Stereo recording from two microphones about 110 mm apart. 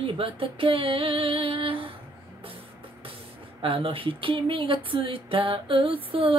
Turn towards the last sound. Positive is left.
turn(degrees=-55)  # may be behind; listen again after turning